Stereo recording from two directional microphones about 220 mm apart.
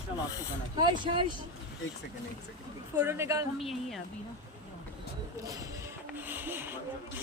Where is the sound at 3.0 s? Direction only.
10° right (ahead or behind).